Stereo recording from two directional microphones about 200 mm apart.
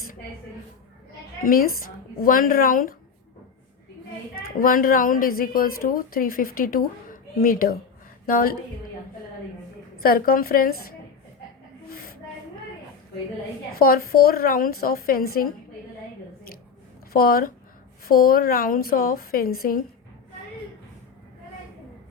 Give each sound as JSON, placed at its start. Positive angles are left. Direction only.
{"t": 1.5, "sound": "a woman's voice", "side_deg": 45}
{"t": 4.6, "sound": "a woman's voice", "side_deg": 45}
{"t": 10.0, "sound": "a woman's voice", "side_deg": 45}
{"t": 11.9, "sound": "a sound", "side_deg": 50}
{"t": 13.7, "sound": "a woman's voice", "side_deg": 50}
{"t": 17.1, "sound": "a woman's voice", "side_deg": 50}